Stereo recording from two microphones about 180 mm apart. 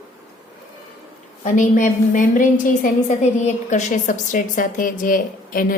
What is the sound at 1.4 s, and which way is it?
A woman's voice, 45° left (ahead or behind).